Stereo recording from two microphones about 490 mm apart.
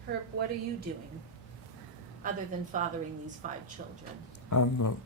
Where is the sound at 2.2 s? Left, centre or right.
Centre.